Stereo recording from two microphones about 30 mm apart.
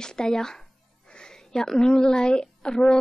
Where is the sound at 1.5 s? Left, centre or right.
Left.